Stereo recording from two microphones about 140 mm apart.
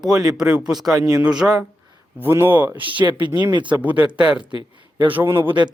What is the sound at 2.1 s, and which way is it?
Speech, 15° right (ahead or behind).